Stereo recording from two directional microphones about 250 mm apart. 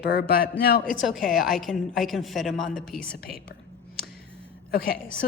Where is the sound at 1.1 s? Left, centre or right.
Centre.